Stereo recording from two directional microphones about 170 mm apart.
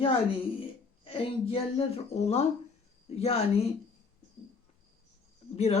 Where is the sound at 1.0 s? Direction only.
35° left (ahead or behind).